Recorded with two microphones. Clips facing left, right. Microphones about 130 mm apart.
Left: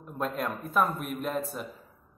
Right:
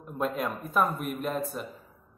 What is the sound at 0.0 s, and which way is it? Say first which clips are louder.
A man's voice: right 2 dB; 5° right (ahead or behind).